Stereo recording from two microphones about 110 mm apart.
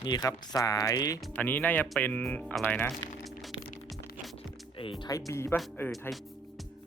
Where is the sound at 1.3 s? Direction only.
15° left (ahead or behind).